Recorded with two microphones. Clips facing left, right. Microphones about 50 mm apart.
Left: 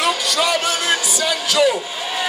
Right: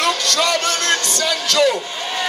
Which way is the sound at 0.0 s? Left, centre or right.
Centre.